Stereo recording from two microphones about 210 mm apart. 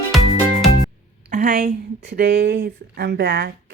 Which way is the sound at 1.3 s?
35° right (ahead or behind).